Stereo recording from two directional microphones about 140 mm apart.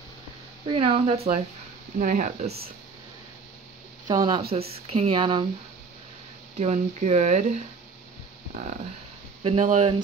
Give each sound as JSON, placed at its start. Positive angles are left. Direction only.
{"t": 0.7, "sound": "speech", "side_deg": -40}
{"t": 2.0, "sound": "speech", "side_deg": -65}
{"t": 4.1, "sound": "speech", "side_deg": -25}
{"t": 4.5, "sound": "speech", "side_deg": -50}
{"t": 5.1, "sound": "speech", "side_deg": -35}
{"t": 6.6, "sound": "speech", "side_deg": -55}
{"t": 9.4, "sound": "speech", "side_deg": -50}